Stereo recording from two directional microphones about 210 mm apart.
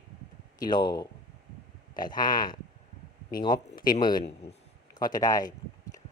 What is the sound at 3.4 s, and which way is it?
Speech, 20° left (ahead or behind).